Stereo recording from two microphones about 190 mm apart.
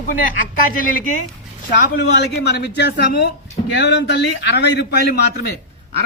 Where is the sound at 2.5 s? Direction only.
60° left (ahead or behind).